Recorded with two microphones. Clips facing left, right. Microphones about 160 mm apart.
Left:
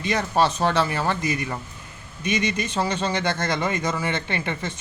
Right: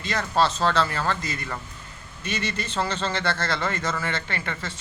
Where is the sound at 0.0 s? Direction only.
15° left (ahead or behind).